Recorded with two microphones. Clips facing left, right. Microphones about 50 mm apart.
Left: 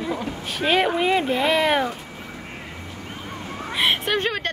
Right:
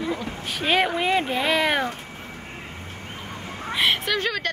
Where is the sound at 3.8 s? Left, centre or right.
Left.